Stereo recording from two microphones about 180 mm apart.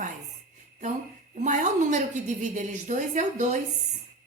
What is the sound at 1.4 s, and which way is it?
A woman's voice, 40° right (ahead or behind).